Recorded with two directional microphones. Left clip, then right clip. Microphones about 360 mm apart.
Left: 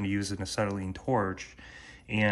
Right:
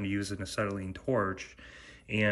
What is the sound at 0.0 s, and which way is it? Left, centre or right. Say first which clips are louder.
Speech: left 2 dB; centre.